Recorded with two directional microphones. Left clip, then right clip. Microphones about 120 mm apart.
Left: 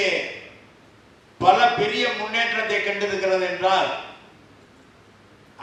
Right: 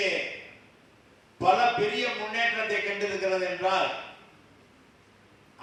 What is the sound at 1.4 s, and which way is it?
A man's voice, 10° left (ahead or behind).